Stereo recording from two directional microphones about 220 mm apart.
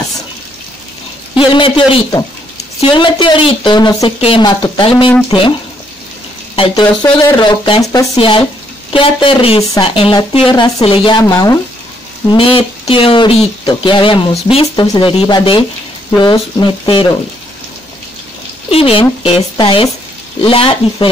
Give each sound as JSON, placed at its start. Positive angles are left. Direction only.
{"t": 1.3, "sound": "speech", "side_deg": 25}
{"t": 6.5, "sound": "speech", "side_deg": 20}
{"t": 18.7, "sound": "speech", "side_deg": 25}